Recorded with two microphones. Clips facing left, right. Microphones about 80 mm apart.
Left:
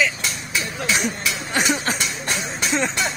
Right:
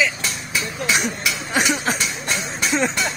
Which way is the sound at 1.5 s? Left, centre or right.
Centre.